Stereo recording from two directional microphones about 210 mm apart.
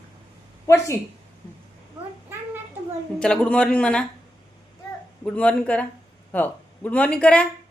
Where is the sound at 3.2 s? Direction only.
5° left (ahead or behind).